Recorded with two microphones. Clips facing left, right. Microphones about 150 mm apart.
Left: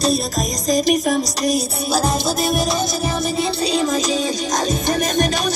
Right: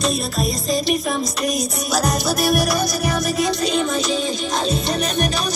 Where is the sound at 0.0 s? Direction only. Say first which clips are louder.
Left 2 dB; 40° left (ahead or behind).